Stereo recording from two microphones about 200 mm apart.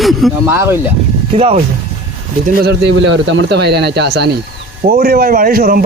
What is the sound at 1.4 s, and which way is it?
Speech, 30° right (ahead or behind).